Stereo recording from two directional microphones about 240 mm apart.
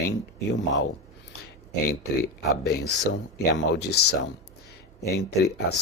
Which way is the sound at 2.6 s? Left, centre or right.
Left.